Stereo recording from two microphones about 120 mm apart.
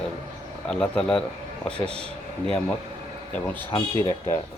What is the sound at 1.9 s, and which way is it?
Speech, 55° right (ahead or behind).